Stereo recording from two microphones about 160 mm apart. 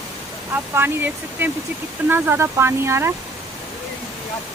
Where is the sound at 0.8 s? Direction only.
10° right (ahead or behind).